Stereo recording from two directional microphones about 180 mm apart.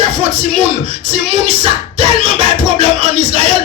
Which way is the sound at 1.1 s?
30° right (ahead or behind).